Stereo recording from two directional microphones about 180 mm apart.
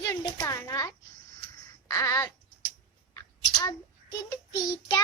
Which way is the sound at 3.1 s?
20° left (ahead or behind).